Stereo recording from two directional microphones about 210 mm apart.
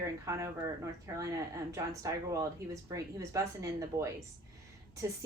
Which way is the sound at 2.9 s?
15° right (ahead or behind).